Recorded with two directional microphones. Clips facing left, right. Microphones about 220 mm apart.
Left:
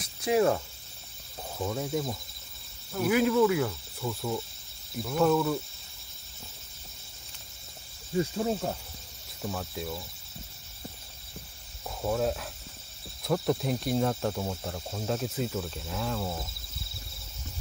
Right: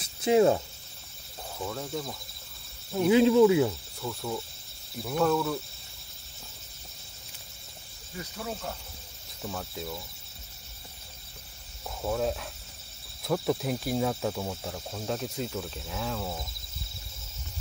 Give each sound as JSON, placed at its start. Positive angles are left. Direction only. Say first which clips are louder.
{"t": 0.0, "sound": "cricket", "louder": "right 3 dB", "side_deg": -25}
{"t": 1.6, "sound": "speech", "louder": "left 4 dB", "side_deg": 15}
{"t": 3.0, "sound": "speech", "louder": "right 4 dB", "side_deg": -25}
{"t": 4.0, "sound": "speech", "louder": "left 2 dB", "side_deg": 0}
{"t": 8.2, "sound": "speech", "louder": "left 9 dB", "side_deg": 30}
{"t": 9.4, "sound": "speech", "louder": "left 2 dB", "side_deg": 0}
{"t": 12.0, "sound": "speech", "louder": "left 1 dB", "side_deg": 0}